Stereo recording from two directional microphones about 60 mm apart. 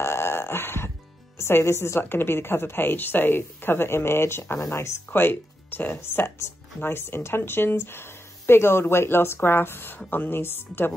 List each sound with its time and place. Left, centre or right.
0.0 s dog: left
1.4 s speech: left
5.2 s speech: left